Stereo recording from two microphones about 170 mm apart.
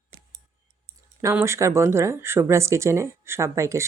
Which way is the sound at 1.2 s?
15° right (ahead or behind).